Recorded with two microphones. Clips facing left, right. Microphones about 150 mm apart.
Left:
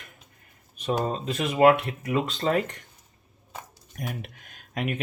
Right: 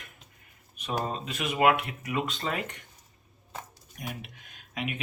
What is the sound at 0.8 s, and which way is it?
Speech, 35° left (ahead or behind).